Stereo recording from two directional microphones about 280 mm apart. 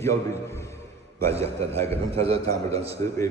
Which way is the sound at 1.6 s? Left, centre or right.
Centre.